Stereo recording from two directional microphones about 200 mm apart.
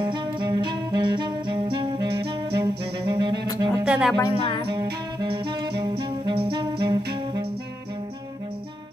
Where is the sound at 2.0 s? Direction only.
55° right (ahead or behind).